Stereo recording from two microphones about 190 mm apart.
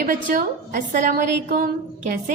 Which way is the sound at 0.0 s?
45° right (ahead or behind).